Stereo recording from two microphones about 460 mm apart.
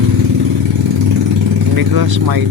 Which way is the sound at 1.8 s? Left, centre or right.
Right.